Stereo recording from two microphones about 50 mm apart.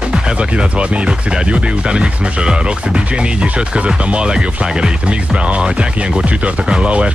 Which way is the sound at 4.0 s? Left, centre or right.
Right.